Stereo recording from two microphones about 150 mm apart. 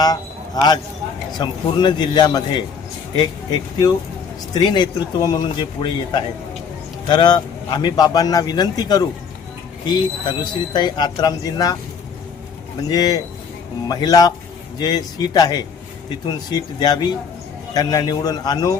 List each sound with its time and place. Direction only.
0.0 s a man's voice: 25° left (ahead or behind)
12.9 s a man's voice: 25° left (ahead or behind)